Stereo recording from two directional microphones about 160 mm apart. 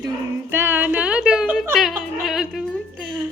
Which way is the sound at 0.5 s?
15° right (ahead or behind).